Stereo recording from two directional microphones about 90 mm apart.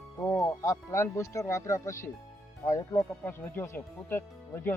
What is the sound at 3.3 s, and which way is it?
Speech, 25° left (ahead or behind).